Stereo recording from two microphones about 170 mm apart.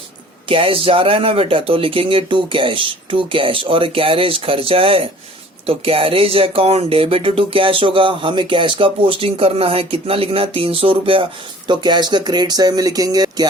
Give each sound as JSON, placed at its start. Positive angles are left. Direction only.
{"t": 0.4, "sound": "speech", "side_deg": -30}